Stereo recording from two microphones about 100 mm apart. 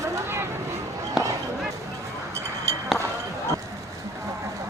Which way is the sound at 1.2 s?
5° right (ahead or behind).